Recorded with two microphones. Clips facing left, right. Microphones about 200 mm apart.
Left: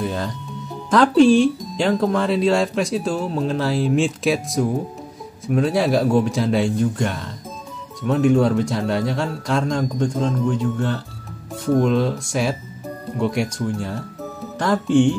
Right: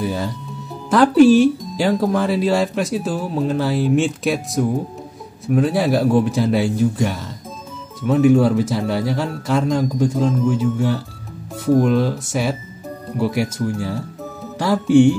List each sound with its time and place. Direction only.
0.0 s speech: 5° right (ahead or behind)